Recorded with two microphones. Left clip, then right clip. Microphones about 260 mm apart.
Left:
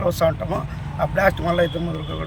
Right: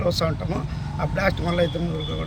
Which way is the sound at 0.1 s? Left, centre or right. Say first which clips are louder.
Left 5 dB; centre.